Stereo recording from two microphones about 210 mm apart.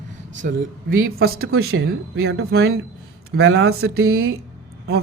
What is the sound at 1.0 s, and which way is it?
Speech, 80° right.